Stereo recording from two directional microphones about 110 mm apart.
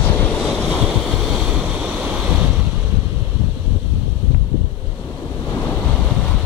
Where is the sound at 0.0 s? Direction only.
20° left (ahead or behind).